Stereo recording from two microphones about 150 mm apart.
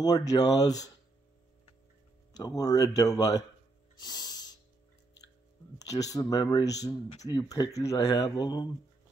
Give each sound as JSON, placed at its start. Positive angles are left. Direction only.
{"t": 0.0, "sound": "speech", "side_deg": 25}
{"t": 2.3, "sound": "speech", "side_deg": 25}
{"t": 3.9, "sound": "music", "side_deg": 25}
{"t": 5.8, "sound": "speech", "side_deg": 25}